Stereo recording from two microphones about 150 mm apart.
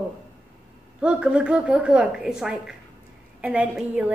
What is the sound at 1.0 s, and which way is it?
A woman's voice, 5° right (ahead or behind).